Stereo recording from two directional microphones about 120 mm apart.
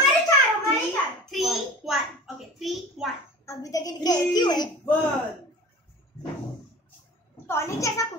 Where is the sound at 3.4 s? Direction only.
30° left (ahead or behind).